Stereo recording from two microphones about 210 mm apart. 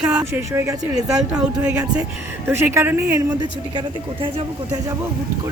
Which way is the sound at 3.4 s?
25° right (ahead or behind).